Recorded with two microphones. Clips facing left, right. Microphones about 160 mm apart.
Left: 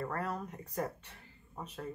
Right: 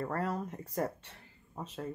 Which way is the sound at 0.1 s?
35° right (ahead or behind).